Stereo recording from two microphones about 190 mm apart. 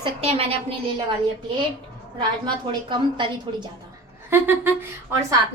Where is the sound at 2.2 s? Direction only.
25° right (ahead or behind).